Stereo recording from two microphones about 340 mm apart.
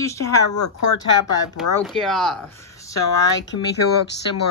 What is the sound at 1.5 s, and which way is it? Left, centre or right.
A woman's voice, centre.